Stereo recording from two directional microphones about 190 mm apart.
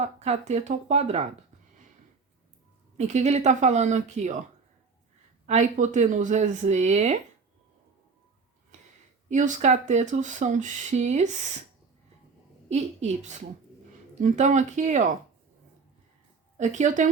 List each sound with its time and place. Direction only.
0.0 s speech: 35° right (ahead or behind)
3.0 s speech: 35° right (ahead or behind)
5.5 s speech: 40° right (ahead or behind)
9.3 s speech: 40° right (ahead or behind)
12.6 s speech: 35° right (ahead or behind)
16.6 s speech: 40° right (ahead or behind)